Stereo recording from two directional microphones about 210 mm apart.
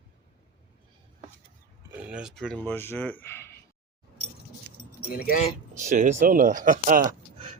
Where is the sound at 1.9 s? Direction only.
5° right (ahead or behind); by 3.6 s 10° left (ahead or behind).